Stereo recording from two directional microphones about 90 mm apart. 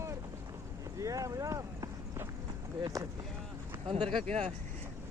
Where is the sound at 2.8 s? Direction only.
40° right (ahead or behind).